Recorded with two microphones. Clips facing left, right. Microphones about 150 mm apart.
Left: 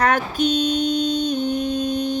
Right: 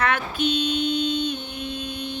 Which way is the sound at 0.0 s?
40° left (ahead or behind).